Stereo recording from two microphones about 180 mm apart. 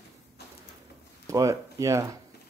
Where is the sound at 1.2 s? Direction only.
20° right (ahead or behind).